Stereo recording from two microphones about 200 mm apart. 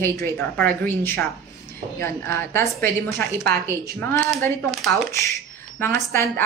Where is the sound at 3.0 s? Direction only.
50° right (ahead or behind).